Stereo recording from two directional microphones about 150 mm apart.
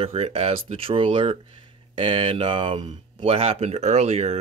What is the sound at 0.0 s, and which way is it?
Speech, 40° right (ahead or behind).